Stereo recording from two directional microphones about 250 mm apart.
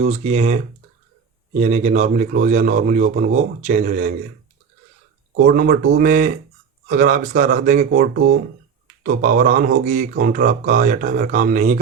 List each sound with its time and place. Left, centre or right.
0.0 s a man's voice: right
5.5 s speech: right